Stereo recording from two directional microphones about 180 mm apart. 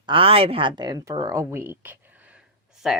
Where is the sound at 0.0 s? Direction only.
30° right (ahead or behind); by 1.7 s 15° right (ahead or behind).